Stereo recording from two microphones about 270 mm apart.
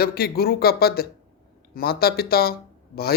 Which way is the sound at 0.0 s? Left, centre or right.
Left.